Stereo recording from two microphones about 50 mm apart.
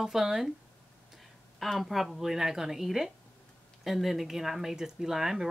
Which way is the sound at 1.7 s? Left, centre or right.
Centre.